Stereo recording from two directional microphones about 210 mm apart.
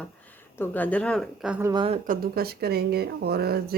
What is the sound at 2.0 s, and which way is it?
Speech, 45° right (ahead or behind).